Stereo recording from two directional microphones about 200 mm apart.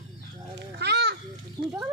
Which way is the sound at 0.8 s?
55° right (ahead or behind).